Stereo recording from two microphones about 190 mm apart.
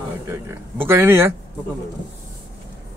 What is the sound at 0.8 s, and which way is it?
Speech, 10° right (ahead or behind).